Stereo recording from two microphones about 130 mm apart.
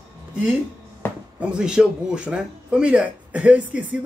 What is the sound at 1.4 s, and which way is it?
Speech, 5° right (ahead or behind).